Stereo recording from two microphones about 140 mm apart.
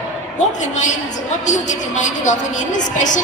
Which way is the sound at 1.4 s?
60° left (ahead or behind).